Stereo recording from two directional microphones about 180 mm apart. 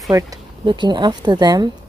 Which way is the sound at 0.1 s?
20° right (ahead or behind).